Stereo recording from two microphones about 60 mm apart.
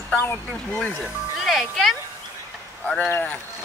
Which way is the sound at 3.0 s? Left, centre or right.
Left.